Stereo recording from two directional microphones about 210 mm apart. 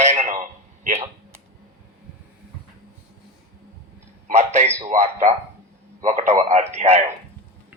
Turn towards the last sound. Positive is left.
turn(degrees=-30)  # may be behind; listen again after turning